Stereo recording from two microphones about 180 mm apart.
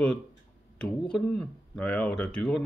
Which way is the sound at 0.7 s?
5° left (ahead or behind).